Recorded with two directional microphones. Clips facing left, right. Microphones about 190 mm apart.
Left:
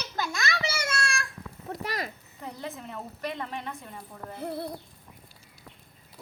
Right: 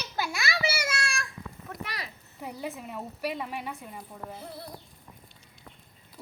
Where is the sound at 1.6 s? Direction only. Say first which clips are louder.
Left 7 dB; 40° left (ahead or behind).